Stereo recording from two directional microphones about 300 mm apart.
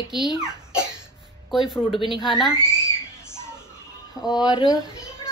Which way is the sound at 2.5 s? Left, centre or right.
Centre.